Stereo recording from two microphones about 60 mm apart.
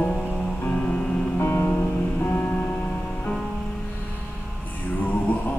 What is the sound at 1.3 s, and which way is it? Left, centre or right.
Music, left.